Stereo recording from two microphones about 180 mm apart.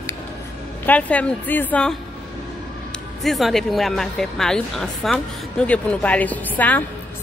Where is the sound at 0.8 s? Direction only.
10° left (ahead or behind).